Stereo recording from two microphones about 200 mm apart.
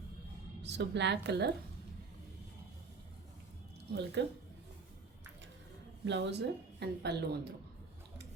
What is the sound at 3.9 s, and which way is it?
Speech, 60° right (ahead or behind).